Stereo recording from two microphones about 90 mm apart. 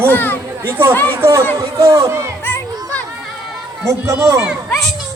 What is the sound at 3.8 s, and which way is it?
Speech, 35° right (ahead or behind).